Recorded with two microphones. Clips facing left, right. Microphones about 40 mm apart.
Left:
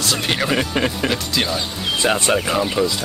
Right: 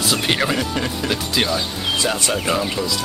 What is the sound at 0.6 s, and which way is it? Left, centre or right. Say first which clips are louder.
Speech: left 3 dB; left.